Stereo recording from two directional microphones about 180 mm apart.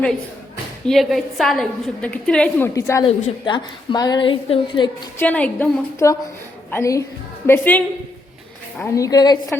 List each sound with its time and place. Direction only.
0.9 s a woman's voice: centre (ahead or behind)
2.7 s a woman's voice: 15° left (ahead or behind)
3.1 s a woman's voice: 40° left (ahead or behind)
3.4 s a woman's voice: 25° left (ahead or behind)
5.2 s a woman's voice: 10° left (ahead or behind)